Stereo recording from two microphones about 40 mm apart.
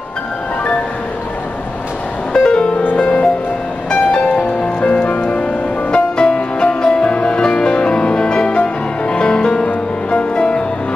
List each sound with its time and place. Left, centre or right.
2.3 s music: left